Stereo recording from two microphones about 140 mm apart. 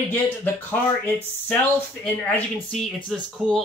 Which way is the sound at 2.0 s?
10° left (ahead or behind).